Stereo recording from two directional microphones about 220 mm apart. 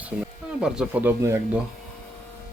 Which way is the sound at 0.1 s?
5° right (ahead or behind).